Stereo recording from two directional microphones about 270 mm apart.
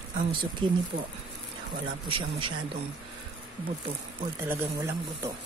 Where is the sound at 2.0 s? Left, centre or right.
Centre.